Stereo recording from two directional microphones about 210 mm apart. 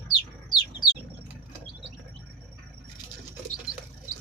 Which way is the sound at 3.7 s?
5° right (ahead or behind).